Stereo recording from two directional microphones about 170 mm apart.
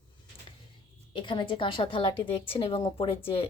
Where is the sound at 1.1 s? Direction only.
30° left (ahead or behind).